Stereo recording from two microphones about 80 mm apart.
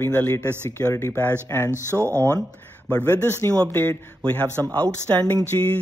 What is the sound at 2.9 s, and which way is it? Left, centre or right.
Speech, left.